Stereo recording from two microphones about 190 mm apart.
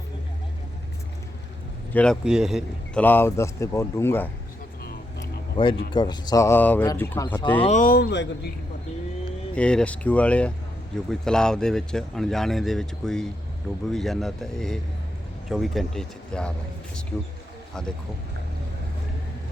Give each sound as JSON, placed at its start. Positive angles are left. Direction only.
{"t": 1.9, "sound": "a man's voice", "side_deg": 5}
{"t": 3.0, "sound": "speech", "side_deg": 10}
{"t": 5.6, "sound": "speech", "side_deg": 25}
{"t": 7.7, "sound": "speech", "side_deg": 45}
{"t": 9.6, "sound": "speech", "side_deg": 5}